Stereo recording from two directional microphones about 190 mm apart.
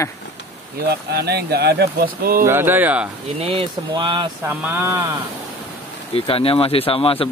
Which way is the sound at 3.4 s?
30° right (ahead or behind).